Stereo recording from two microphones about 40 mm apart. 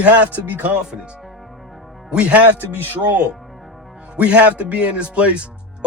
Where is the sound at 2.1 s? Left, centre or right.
Right.